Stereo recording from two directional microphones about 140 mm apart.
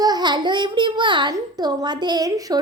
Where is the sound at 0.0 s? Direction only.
30° right (ahead or behind).